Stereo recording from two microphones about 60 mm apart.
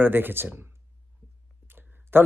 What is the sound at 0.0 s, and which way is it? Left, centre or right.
Speech, right.